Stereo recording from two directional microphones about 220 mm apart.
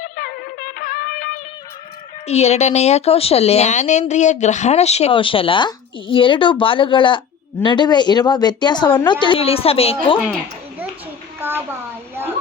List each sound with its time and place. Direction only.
0.0 s music: 40° left (ahead or behind)
2.2 s speech: 30° left (ahead or behind)
11.3 s a sound: 10° right (ahead or behind)